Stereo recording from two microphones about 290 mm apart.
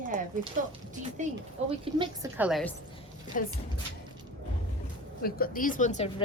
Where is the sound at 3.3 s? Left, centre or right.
Left.